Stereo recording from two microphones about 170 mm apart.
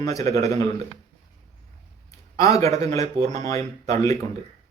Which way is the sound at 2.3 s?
20° left (ahead or behind).